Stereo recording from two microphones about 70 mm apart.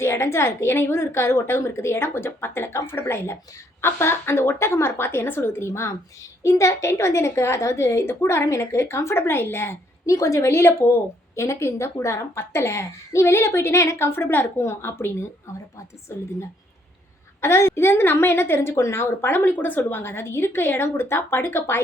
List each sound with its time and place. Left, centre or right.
0.0 s a woman's voice: left
10.1 s speech: left
10.5 s a woman's voice: left
17.4 s a woman's voice: left